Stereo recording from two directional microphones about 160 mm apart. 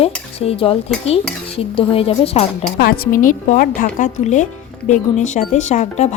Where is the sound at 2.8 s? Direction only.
70° left (ahead or behind).